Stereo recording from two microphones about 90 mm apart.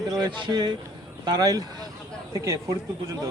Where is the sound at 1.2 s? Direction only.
45° right (ahead or behind).